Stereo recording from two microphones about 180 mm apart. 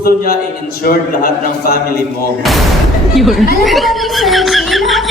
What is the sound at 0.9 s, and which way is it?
Speech, 60° left (ahead or behind).